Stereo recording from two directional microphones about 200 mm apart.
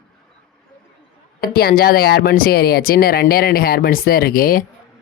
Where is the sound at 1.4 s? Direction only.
50° left (ahead or behind).